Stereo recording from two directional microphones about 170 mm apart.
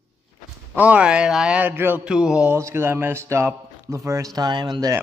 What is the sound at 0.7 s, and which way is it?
Speech, 10° right (ahead or behind).